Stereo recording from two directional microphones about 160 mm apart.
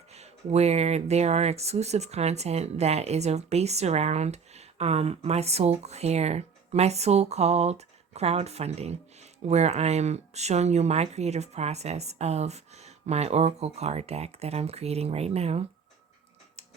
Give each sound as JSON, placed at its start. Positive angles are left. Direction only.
{"t": 0.1, "sound": "speech", "side_deg": -40}